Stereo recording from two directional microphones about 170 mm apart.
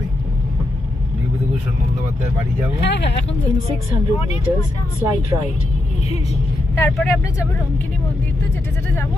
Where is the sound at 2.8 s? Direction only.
90° left.